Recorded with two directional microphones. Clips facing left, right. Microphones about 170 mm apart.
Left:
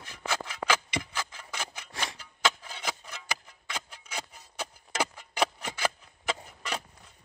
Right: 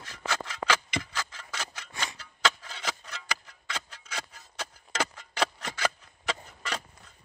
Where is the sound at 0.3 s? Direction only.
10° left (ahead or behind).